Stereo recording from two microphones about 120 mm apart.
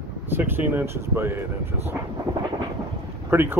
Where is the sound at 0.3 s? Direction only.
15° right (ahead or behind).